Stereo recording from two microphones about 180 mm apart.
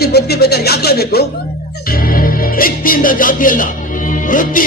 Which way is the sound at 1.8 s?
55° left (ahead or behind).